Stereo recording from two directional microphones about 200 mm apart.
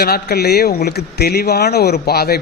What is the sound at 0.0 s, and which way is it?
A man's voice, 50° left (ahead or behind).